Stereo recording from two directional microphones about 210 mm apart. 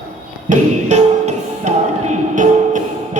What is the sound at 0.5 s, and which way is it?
Music, 35° right (ahead or behind).